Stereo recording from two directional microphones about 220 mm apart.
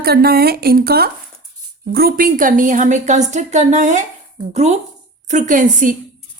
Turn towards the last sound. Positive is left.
turn(degrees=-35)  # may be behind; listen again after turning